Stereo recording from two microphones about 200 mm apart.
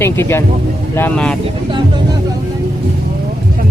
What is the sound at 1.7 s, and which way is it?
Vehicle, 20° right (ahead or behind).